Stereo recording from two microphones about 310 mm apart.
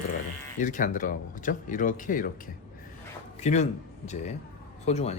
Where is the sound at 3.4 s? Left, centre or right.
Left.